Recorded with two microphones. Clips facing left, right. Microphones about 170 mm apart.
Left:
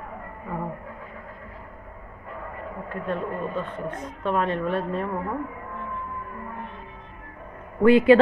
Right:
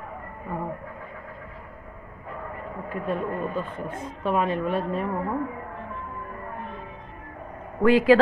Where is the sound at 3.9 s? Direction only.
30° right (ahead or behind).